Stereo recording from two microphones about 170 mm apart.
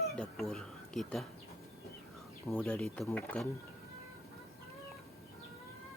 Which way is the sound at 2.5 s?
5° left (ahead or behind).